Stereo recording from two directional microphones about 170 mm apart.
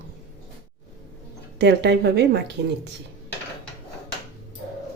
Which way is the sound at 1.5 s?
90° right.